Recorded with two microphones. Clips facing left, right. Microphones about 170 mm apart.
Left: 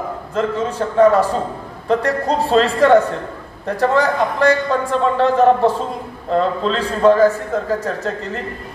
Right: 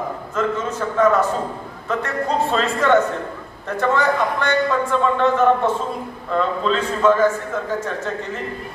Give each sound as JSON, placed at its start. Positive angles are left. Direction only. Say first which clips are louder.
{"t": 0.3, "sound": "a man's voice", "louder": "left 3 dB", "side_deg": 30}